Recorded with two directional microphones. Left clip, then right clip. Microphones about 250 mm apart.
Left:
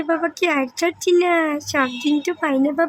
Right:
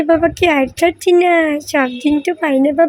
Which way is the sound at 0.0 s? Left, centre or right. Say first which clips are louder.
Right 8 dB; centre.